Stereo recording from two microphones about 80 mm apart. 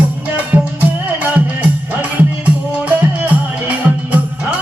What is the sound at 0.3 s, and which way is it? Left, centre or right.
Music, centre.